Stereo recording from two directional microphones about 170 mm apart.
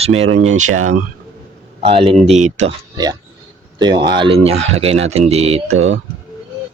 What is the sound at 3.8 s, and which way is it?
Speech, 25° right (ahead or behind).